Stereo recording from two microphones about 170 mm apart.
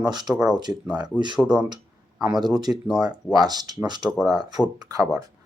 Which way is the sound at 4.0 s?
Centre (ahead or behind).